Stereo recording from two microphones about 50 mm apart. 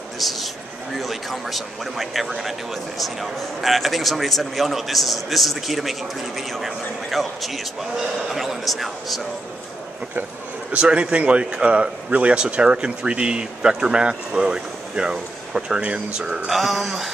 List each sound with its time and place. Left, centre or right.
0.2 s a man's voice: centre
10.7 s speech: right
16.4 s a man's voice: centre